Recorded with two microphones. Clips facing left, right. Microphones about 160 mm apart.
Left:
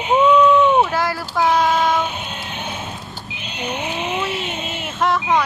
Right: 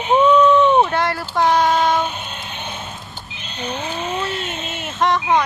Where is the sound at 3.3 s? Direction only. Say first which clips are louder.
Left 1 dB; 15° left (ahead or behind).